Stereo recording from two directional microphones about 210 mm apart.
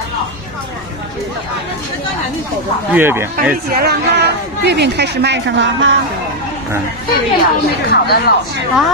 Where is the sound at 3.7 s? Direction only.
50° right (ahead or behind).